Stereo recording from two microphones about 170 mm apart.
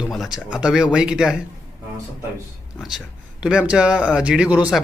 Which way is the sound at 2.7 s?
5° right (ahead or behind).